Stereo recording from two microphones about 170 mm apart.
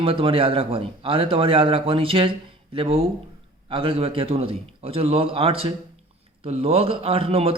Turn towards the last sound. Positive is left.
turn(degrees=-35)  # may be behind; listen again after turning